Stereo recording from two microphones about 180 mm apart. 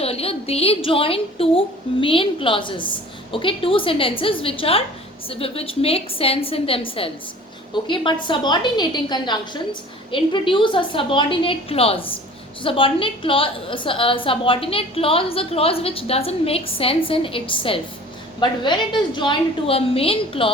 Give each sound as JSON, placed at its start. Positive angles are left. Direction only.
{"t": 0.0, "sound": "a woman's voice", "side_deg": 35}